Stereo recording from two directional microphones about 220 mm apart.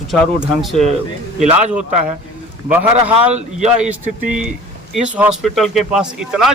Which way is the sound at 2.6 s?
5° right (ahead or behind).